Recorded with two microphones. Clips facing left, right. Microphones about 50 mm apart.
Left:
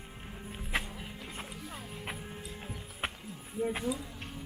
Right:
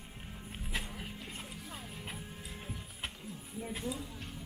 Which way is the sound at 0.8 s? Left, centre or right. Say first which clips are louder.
Left 1 dB; centre.